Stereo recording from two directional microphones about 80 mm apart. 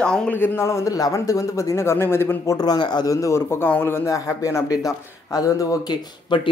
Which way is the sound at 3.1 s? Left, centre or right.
Left.